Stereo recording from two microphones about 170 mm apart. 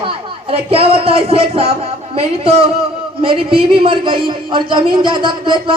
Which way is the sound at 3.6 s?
30° right (ahead or behind).